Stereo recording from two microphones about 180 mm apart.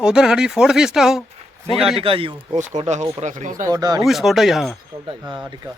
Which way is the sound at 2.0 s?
30° right (ahead or behind).